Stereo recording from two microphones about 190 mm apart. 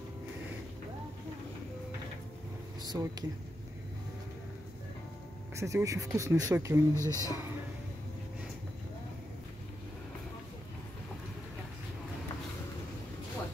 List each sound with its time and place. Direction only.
2.8 s speech: 20° right (ahead or behind)
5.6 s speech: 15° right (ahead or behind)
7.0 s speech: 15° left (ahead or behind)